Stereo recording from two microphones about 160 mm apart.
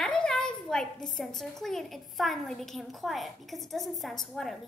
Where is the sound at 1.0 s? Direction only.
Centre (ahead or behind).